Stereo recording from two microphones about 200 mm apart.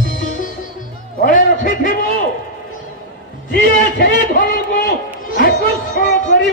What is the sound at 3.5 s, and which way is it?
A man's voice, 45° left (ahead or behind).